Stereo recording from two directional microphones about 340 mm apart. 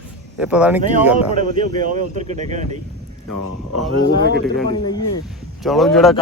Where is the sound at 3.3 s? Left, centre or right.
Left.